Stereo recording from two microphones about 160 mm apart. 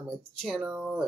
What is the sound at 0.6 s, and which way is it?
Speech, 10° right (ahead or behind).